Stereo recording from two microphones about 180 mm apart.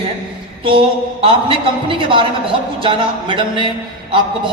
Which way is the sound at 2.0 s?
30° right (ahead or behind).